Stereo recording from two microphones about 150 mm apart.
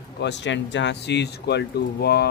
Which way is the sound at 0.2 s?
90° left.